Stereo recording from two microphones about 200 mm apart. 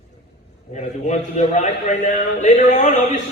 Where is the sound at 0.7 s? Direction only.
35° left (ahead or behind).